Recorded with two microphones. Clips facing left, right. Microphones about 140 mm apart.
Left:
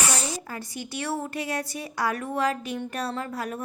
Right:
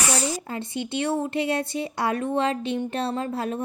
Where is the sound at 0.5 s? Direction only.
25° right (ahead or behind).